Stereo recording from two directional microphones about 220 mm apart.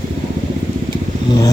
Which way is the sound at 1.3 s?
15° left (ahead or behind).